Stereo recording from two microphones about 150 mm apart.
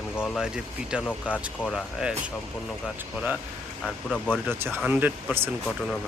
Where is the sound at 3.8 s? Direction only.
5° left (ahead or behind).